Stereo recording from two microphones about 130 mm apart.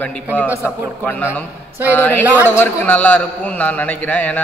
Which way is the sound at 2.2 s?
15° right (ahead or behind).